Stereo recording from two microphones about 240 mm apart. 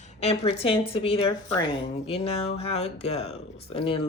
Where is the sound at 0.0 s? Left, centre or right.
Left.